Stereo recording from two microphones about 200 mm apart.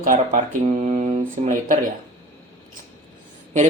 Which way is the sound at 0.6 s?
35° right (ahead or behind).